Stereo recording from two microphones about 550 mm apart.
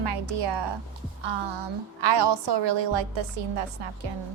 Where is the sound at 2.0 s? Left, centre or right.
Right.